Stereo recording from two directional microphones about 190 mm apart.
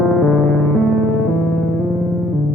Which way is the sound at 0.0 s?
Centre (ahead or behind).